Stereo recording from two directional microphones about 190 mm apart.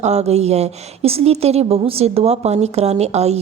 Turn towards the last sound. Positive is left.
turn(degrees=-35)  # may be behind; listen again after turning